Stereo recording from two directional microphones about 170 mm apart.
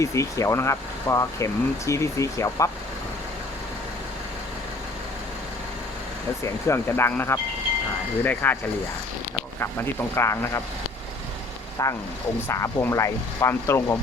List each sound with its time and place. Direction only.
0.0 s speech: 20° left (ahead or behind)
6.4 s speech: 15° left (ahead or behind)
9.6 s speech: 15° left (ahead or behind)
11.8 s speech: 20° left (ahead or behind)